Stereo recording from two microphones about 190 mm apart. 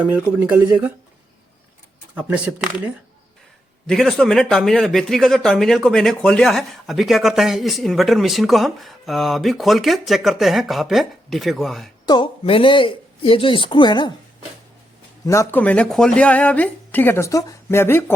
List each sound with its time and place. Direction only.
0.0 s speech: 10° right (ahead or behind)
2.1 s speech: 5° right (ahead or behind)
3.8 s speech: centre (ahead or behind)
12.0 s speech: 25° left (ahead or behind)
15.3 s speech: 10° left (ahead or behind)